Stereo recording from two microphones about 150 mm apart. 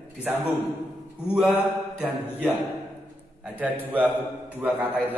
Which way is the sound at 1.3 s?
5° right (ahead or behind).